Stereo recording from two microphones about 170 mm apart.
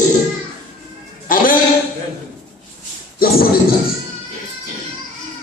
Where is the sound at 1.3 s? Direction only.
55° left (ahead or behind).